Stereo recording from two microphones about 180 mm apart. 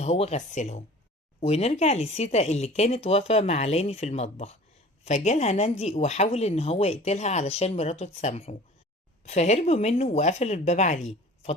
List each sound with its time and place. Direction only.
0.0 s speech: 35° left (ahead or behind)